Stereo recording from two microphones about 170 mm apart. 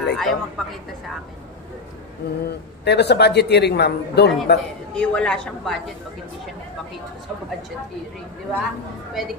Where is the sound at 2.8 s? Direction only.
80° left.